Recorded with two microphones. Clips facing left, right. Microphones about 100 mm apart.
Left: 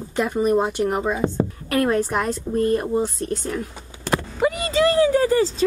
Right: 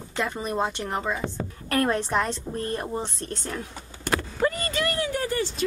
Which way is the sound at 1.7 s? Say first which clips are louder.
Left 3 dB; 5° left (ahead or behind).